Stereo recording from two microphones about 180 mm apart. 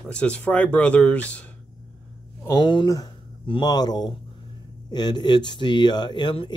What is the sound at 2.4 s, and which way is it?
Speech, 20° left (ahead or behind).